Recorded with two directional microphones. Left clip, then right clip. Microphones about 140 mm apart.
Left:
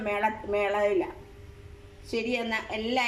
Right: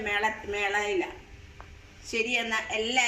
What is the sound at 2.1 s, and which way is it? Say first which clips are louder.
Speech: right 2 dB; 5° left (ahead or behind).